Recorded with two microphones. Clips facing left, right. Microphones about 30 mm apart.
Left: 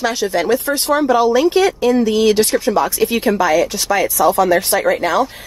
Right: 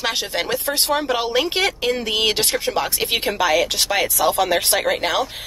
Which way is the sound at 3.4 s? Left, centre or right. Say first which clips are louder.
Left 3 dB; right.